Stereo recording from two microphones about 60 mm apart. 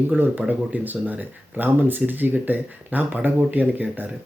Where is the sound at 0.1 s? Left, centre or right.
Right.